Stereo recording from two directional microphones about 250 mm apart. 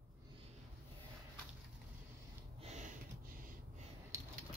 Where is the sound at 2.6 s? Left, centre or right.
Right.